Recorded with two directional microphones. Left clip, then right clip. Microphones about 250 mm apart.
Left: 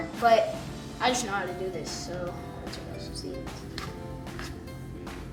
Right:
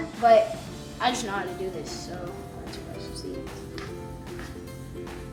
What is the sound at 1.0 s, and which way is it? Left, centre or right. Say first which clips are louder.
Speech: even; centre.